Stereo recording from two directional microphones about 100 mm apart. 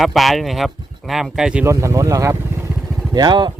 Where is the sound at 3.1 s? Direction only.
45° right (ahead or behind).